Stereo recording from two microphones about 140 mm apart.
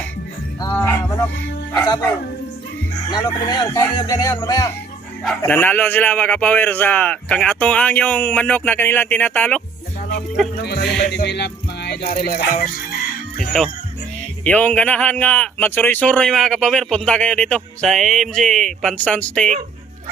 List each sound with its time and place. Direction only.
0.7 s music: 10° left (ahead or behind)
1.7 s speech: 25° left (ahead or behind)
3.1 s speech: 30° left (ahead or behind)
5.4 s speech: 15° left (ahead or behind)
10.3 s music: centre (ahead or behind)
12.0 s music: 90° left
13.5 s music: 5° left (ahead or behind)
14.4 s speech: 10° left (ahead or behind)